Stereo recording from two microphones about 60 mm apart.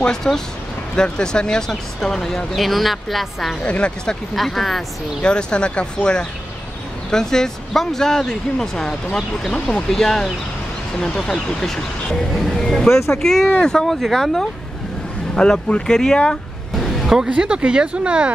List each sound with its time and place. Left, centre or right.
0.0 s speech: centre
3.6 s speech: centre
4.4 s speech: centre
5.2 s speech: centre
16.7 s vehicle: centre
17.6 s speech: centre